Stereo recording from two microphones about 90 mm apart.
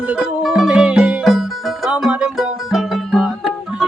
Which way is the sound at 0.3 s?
5° right (ahead or behind).